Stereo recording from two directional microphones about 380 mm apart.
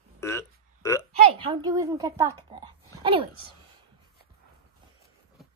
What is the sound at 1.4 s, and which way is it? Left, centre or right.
A woman's voice, centre.